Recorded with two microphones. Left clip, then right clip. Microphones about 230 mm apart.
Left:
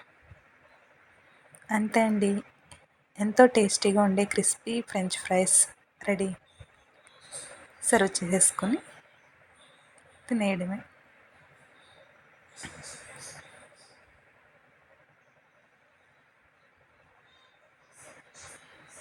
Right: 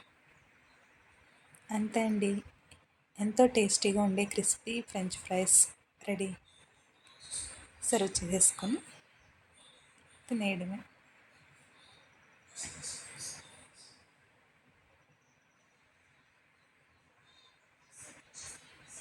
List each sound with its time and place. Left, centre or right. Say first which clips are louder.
1.6 s a woman's voice: left 8 dB; centre
7.8 s a woman's voice: left 7 dB; centre
10.2 s a woman's voice: left 6 dB; centre